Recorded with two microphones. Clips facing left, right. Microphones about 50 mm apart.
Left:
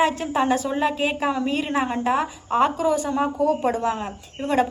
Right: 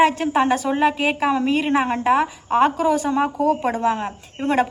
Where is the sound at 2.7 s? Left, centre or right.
Right.